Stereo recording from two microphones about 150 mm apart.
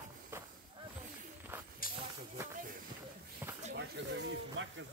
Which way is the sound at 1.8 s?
70° left (ahead or behind).